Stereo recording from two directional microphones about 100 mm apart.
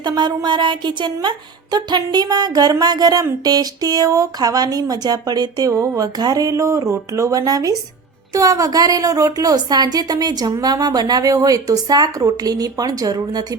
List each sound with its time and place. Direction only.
0.0 s a woman's voice: 45° right (ahead or behind)